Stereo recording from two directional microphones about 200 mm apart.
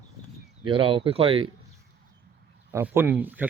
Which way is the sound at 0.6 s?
25° right (ahead or behind).